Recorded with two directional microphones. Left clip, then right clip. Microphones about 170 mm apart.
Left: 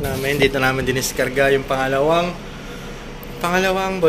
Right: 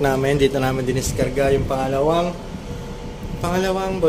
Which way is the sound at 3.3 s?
5° right (ahead or behind).